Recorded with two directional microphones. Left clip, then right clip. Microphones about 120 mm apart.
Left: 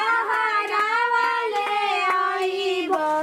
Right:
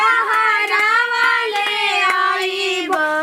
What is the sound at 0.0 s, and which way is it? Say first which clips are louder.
Child singing: right 7 dB; 40° right (ahead or behind).